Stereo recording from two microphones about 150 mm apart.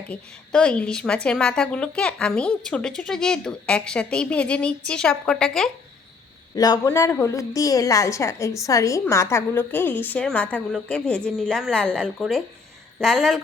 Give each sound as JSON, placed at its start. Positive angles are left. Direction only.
{"t": 0.1, "sound": "a woman's voice", "side_deg": 5}
{"t": 6.8, "sound": "a woman's voice", "side_deg": 20}